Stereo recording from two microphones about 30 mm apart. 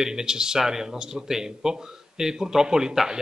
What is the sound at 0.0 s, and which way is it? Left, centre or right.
Speech, centre.